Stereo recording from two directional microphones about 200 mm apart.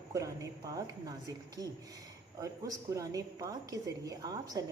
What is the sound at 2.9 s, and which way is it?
A woman's voice, 15° right (ahead or behind).